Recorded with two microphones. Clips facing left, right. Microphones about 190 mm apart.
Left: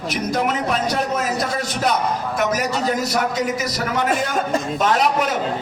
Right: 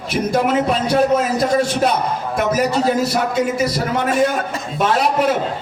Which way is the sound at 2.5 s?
30° right (ahead or behind).